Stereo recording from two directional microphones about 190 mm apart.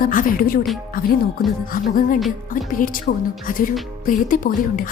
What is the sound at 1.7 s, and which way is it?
A woman's voice, 45° left (ahead or behind).